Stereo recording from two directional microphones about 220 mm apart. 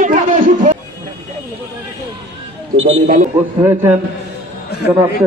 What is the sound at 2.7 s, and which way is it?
Speech, 25° right (ahead or behind).